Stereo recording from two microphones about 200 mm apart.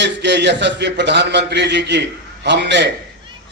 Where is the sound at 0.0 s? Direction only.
60° right (ahead or behind).